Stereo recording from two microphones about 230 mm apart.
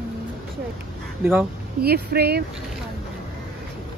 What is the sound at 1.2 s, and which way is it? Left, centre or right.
Speech, centre.